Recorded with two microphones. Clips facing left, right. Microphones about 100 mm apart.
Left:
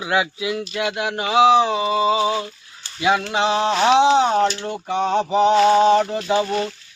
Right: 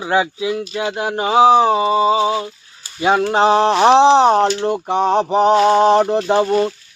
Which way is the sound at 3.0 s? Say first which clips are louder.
Right 5 dB; 35° right (ahead or behind).